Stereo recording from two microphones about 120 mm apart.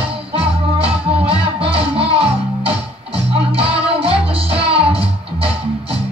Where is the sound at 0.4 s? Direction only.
55° right (ahead or behind).